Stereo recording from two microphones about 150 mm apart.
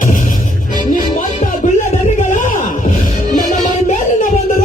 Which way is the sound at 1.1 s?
60° left (ahead or behind).